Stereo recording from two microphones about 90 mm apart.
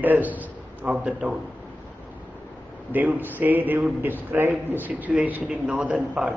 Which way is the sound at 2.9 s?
20° right (ahead or behind).